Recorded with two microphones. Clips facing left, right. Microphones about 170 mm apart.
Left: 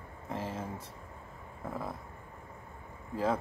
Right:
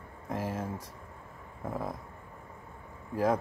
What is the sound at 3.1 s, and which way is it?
Speech, 10° right (ahead or behind).